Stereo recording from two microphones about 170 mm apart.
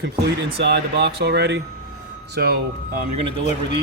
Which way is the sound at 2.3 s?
65° right (ahead or behind).